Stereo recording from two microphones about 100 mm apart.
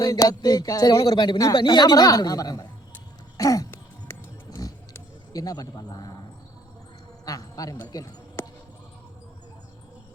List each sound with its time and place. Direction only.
0.0 s speech: 40° left (ahead or behind)
3.3 s a sound: 35° left (ahead or behind)
5.3 s speech: 40° left (ahead or behind)
7.3 s a woman's voice: 35° left (ahead or behind)